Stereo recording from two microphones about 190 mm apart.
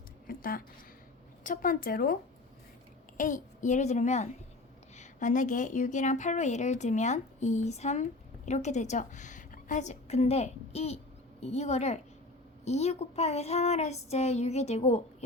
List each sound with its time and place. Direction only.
0.3 s a woman's voice: 50° left (ahead or behind)
3.2 s a woman's voice: 45° left (ahead or behind)